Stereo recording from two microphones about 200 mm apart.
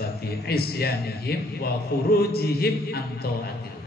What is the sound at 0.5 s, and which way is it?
A man's voice, 50° left (ahead or behind).